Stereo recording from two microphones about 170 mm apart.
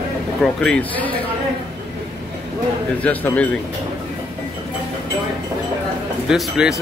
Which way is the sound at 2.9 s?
10° left (ahead or behind).